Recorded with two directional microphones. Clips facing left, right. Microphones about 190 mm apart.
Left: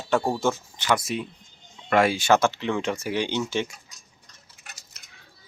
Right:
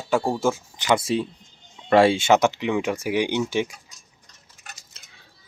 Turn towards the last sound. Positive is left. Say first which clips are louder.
# right 2 dB
turn(degrees=-30)  # may be behind; listen again after turning